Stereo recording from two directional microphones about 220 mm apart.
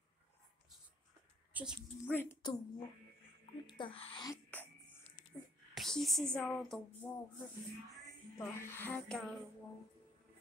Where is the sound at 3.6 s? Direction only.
20° left (ahead or behind).